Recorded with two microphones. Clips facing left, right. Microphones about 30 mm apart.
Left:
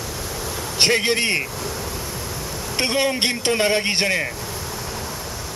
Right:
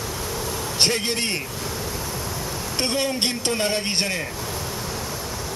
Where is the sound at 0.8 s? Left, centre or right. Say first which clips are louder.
Left 5 dB; left.